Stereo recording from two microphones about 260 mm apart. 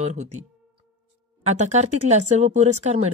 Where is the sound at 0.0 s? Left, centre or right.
Right.